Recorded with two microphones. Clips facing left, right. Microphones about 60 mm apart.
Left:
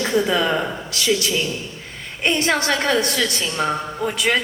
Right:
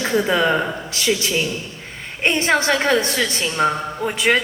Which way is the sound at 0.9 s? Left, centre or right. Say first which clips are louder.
Even; right.